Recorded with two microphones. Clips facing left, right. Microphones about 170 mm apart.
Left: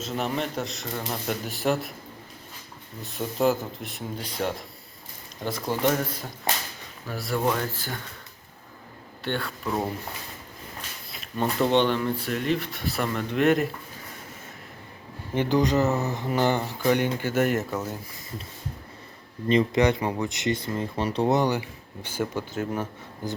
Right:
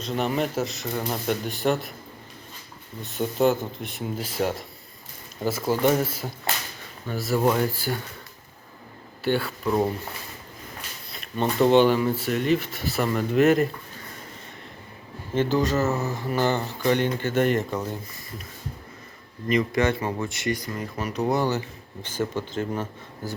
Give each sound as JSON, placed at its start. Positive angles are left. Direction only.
{"t": 0.0, "sound": "speech", "side_deg": 0}
{"t": 3.0, "sound": "speech", "side_deg": 0}
{"t": 9.2, "sound": "speech", "side_deg": -5}
{"t": 11.1, "sound": "a sound", "side_deg": 0}
{"t": 11.6, "sound": "speech", "side_deg": -5}
{"t": 15.4, "sound": "speech", "side_deg": 15}
{"t": 19.5, "sound": "speech", "side_deg": 30}
{"t": 19.8, "sound": "speech", "side_deg": 15}